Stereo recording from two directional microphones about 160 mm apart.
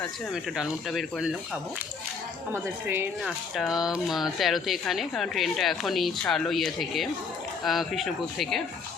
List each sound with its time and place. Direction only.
0.5 s speech: centre (ahead or behind)
2.5 s a woman's voice: 15° right (ahead or behind)
3.2 s speech: centre (ahead or behind)